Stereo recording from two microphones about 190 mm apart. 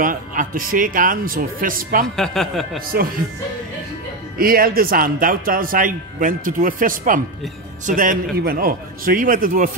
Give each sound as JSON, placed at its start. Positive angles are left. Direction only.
{"t": 0.0, "sound": "a man's voice", "side_deg": -45}
{"t": 2.1, "sound": "speech", "side_deg": 0}
{"t": 4.4, "sound": "a man's voice", "side_deg": -50}